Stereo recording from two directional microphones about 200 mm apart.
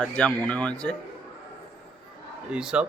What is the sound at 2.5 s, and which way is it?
Speech, 5° right (ahead or behind).